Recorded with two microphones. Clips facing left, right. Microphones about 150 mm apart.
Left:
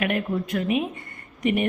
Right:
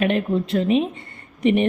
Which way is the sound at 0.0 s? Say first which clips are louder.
Right 5 dB; 25° right (ahead or behind).